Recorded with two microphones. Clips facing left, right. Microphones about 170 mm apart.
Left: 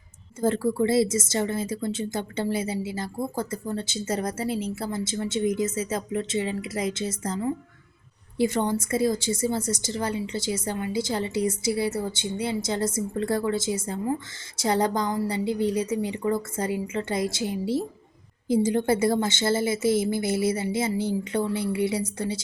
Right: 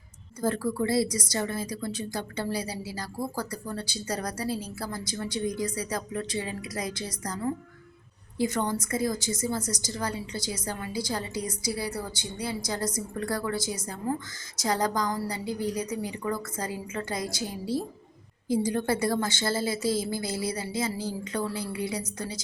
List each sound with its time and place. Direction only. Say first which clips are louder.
0.4 s a woman's voice: left 4 dB; 25° left (ahead or behind)
8.4 s a woman's voice: left 4 dB; 25° left (ahead or behind)